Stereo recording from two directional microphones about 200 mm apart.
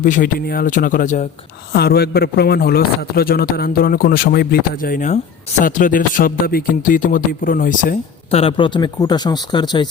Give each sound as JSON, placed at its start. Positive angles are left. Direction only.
{"t": 0.0, "sound": "a man's voice", "side_deg": 45}
{"t": 1.7, "sound": "a man's voice", "side_deg": 55}
{"t": 8.3, "sound": "speech", "side_deg": 30}